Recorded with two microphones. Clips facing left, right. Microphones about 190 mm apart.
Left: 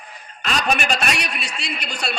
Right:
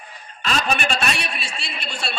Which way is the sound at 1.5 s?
40° left (ahead or behind).